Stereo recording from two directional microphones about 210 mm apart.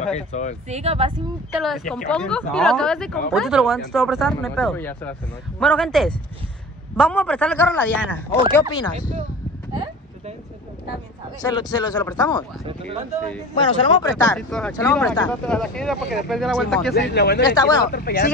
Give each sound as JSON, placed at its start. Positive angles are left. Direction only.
{"t": 0.1, "sound": "speech", "side_deg": 35}
{"t": 0.7, "sound": "speech", "side_deg": -30}
{"t": 1.6, "sound": "a man's voice", "side_deg": 0}
{"t": 8.7, "sound": "a man's voice", "side_deg": 20}
{"t": 11.4, "sound": "a man's voice", "side_deg": 20}
{"t": 13.6, "sound": "a man's voice", "side_deg": 15}
{"t": 14.3, "sound": "speech", "side_deg": 5}
{"t": 17.1, "sound": "speech", "side_deg": 50}
{"t": 17.4, "sound": "a man's voice", "side_deg": 20}
{"t": 17.8, "sound": "speech", "side_deg": 45}